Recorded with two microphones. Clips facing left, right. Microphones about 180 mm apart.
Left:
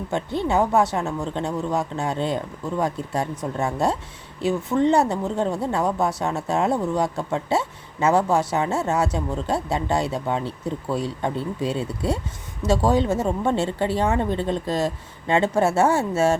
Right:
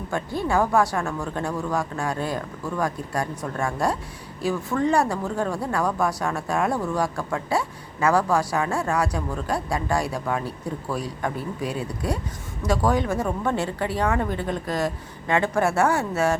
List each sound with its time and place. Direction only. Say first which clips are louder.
0.1 s speech: left 1 dB; 25° left (ahead or behind)